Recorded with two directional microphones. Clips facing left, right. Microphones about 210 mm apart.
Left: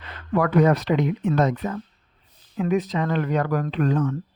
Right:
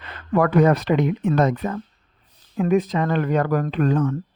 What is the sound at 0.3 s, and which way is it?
Speech, 50° right (ahead or behind).